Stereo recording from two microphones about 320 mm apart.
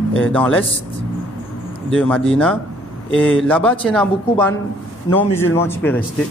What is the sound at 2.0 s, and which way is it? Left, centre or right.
A man's voice, centre.